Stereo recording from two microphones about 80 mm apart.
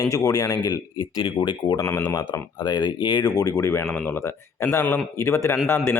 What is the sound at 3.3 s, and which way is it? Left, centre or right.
Speech, left.